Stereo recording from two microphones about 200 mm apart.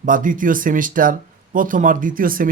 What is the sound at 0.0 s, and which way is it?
A man's voice, 40° right (ahead or behind).